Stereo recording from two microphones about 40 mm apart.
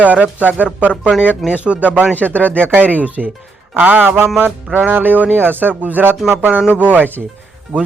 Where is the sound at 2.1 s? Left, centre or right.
Left.